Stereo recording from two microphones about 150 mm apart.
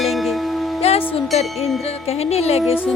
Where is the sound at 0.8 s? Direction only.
40° left (ahead or behind).